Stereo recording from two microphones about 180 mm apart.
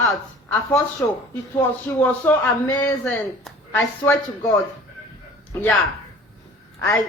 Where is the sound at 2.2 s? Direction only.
10° left (ahead or behind).